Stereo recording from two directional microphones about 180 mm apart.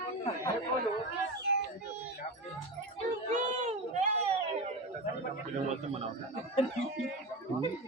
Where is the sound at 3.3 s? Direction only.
40° right (ahead or behind).